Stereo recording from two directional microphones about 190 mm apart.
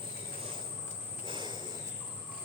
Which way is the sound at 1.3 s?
25° right (ahead or behind).